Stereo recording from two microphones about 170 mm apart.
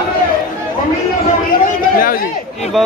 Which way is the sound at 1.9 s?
55° left (ahead or behind).